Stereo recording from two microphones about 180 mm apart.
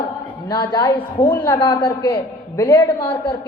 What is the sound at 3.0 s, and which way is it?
Speech, 25° left (ahead or behind).